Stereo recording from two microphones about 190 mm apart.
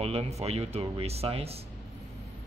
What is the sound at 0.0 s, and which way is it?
Speech, 30° right (ahead or behind).